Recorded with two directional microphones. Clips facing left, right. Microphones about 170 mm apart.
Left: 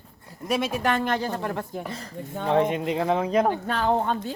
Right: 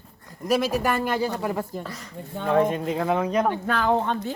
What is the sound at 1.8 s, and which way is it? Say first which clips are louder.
Speech: left 2 dB; 30° left (ahead or behind).